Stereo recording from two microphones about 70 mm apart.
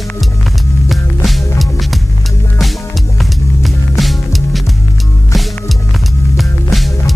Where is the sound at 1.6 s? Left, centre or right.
Centre.